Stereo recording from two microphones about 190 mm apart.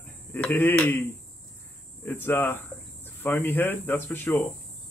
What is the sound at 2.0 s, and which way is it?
Speech, 10° left (ahead or behind).